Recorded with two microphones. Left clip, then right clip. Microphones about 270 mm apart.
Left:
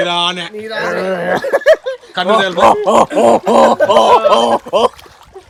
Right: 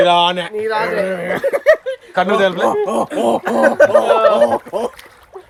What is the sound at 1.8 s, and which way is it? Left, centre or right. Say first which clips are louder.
Speech: left 2 dB; centre.